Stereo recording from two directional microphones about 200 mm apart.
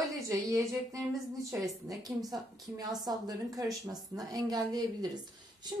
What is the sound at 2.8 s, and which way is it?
A woman's voice, 20° right (ahead or behind).